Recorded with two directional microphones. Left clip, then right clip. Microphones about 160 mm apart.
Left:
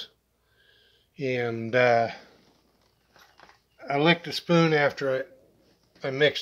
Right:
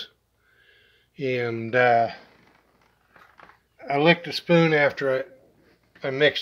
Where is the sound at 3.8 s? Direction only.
5° left (ahead or behind).